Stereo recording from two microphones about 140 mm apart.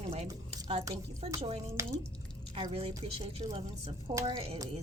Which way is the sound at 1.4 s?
45° right (ahead or behind).